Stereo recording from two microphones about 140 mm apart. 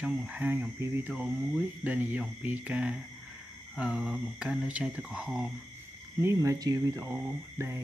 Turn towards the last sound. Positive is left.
turn(degrees=-20)  # may be behind; listen again after turning